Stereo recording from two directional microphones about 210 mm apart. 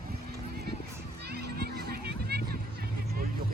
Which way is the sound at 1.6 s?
50° right (ahead or behind).